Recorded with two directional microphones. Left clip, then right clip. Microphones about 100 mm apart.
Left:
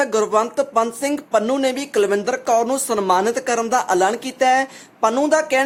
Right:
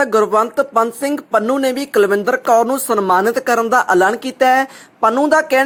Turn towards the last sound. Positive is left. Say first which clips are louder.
# right 4 dB
turn(degrees=-40)  # may be behind; listen again after turning